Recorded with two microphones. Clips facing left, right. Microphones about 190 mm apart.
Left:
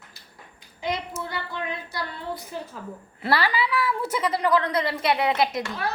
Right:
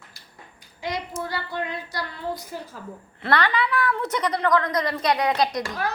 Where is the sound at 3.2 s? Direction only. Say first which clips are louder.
Right 1 dB; 5° left (ahead or behind).